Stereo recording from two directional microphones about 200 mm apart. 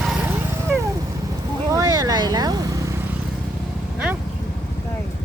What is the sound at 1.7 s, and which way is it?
Vehicle, 20° right (ahead or behind).